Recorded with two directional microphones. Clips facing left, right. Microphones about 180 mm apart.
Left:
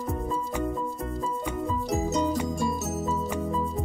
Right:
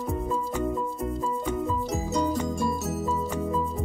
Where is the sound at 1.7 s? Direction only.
Centre (ahead or behind).